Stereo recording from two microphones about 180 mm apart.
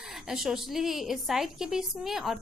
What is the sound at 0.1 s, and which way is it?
A woman's voice, centre (ahead or behind).